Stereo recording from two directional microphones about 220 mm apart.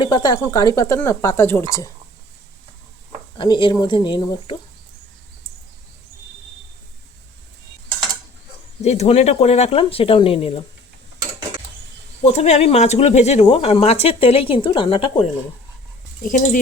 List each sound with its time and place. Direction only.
0.0 s speech: 20° left (ahead or behind)
3.3 s speech: 20° left (ahead or behind)
8.8 s speech: 30° left (ahead or behind)
12.2 s speech: 30° left (ahead or behind)
16.2 s speech: 35° left (ahead or behind)